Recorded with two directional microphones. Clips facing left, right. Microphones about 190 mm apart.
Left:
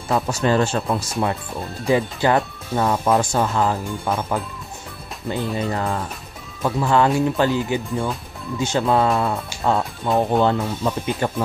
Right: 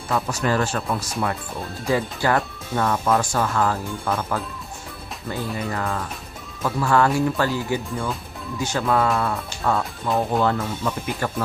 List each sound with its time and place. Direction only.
0.1 s speech: 25° left (ahead or behind)
10.0 s speech: centre (ahead or behind)
10.4 s speech: 20° left (ahead or behind)